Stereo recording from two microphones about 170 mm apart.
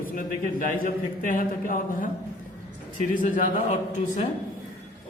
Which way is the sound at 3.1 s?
50° left (ahead or behind).